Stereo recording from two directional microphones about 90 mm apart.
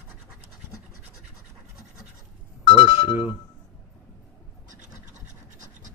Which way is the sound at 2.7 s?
70° left (ahead or behind).